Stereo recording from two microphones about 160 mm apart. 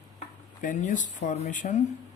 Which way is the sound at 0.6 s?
50° left (ahead or behind).